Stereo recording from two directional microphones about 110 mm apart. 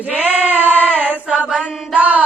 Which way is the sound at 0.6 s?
15° left (ahead or behind).